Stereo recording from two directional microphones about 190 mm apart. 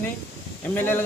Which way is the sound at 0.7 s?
10° left (ahead or behind).